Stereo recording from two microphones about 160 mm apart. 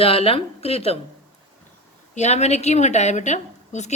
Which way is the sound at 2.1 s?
45° left (ahead or behind).